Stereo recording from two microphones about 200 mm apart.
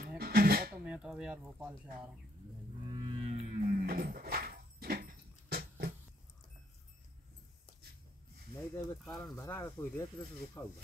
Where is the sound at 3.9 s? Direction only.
45° right (ahead or behind).